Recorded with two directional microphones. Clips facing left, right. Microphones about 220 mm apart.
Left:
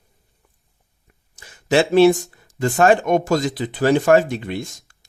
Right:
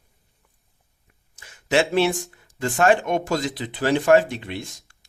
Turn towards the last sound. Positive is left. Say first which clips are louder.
# left 2 dB
turn(degrees=45)  # may be behind; listen again after turning